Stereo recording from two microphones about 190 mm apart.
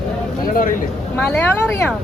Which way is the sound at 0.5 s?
45° left (ahead or behind).